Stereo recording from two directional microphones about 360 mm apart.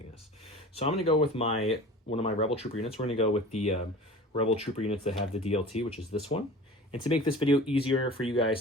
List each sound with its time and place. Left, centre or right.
0.7 s speech: centre